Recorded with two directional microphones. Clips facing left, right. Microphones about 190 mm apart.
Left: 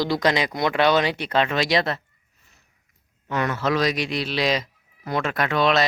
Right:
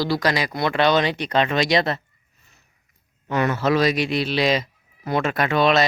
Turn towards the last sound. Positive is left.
turn(degrees=0)  # may be behind; listen again after turning